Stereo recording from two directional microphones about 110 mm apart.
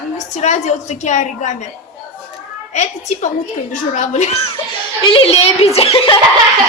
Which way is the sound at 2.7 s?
90° left.